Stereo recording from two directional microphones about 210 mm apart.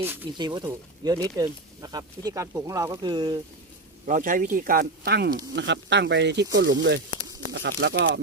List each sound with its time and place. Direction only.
0.0 s speech: 10° right (ahead or behind)
0.3 s speech: 20° right (ahead or behind)
4.0 s speech: 40° right (ahead or behind); by 8.2 s 60° right (ahead or behind)